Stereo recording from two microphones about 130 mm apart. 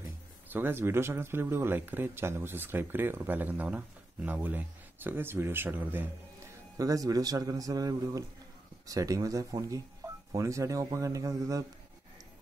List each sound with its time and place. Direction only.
0.5 s speech: 15° right (ahead or behind)
6.8 s a man's voice: 25° right (ahead or behind)